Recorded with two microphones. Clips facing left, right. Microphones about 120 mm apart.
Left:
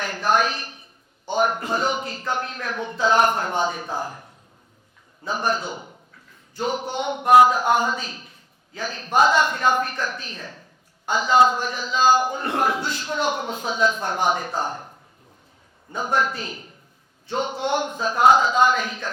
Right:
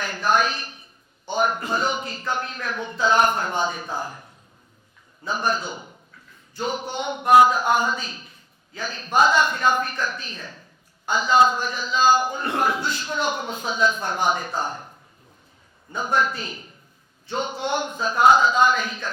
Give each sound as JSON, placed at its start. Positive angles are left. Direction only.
{"t": 0.0, "sound": "a woman's voice", "side_deg": 60}
{"t": 3.9, "sound": "speech", "side_deg": 35}
{"t": 5.2, "sound": "a man's voice", "side_deg": 60}
{"t": 16.0, "sound": "a man's voice", "side_deg": 55}